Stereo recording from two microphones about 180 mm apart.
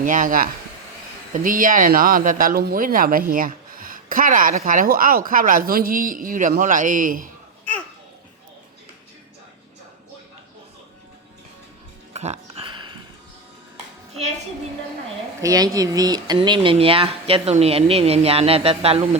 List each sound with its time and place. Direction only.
0.0 s speech: 50° right (ahead or behind)
12.1 s a sound: 35° right (ahead or behind)
15.4 s speech: 20° right (ahead or behind)